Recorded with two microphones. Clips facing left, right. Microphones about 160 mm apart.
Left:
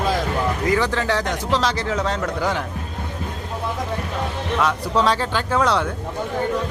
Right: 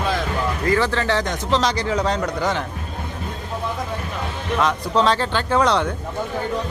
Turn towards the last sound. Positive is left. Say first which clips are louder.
# right 1 dB
turn(degrees=5)  # may be behind; listen again after turning